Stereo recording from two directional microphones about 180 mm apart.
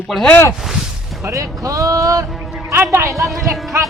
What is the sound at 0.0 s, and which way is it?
Speech, 5° left (ahead or behind).